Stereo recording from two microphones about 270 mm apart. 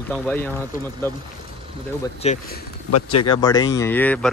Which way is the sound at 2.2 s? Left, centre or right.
Left.